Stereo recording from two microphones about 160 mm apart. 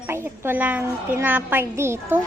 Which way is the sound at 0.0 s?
15° right (ahead or behind).